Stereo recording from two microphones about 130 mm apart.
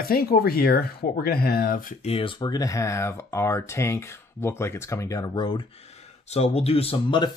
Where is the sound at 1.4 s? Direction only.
90° left.